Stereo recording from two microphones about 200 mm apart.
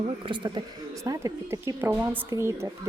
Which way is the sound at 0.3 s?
25° right (ahead or behind).